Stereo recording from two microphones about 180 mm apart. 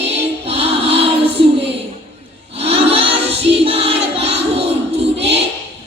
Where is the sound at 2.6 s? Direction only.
35° right (ahead or behind).